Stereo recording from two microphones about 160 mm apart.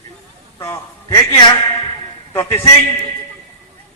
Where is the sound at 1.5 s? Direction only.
25° left (ahead or behind).